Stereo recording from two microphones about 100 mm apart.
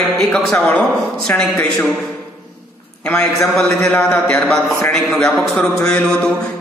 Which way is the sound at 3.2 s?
5° left (ahead or behind).